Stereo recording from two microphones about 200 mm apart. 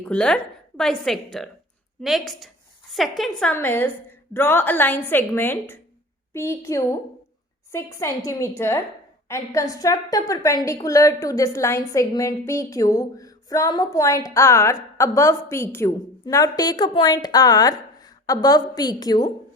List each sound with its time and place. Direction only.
0.0 s a woman's voice: 5° left (ahead or behind)